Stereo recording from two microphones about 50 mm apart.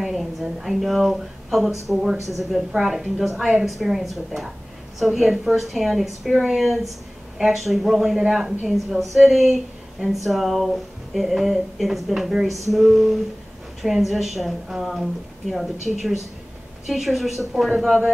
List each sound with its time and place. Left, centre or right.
0.0 s a woman's voice: centre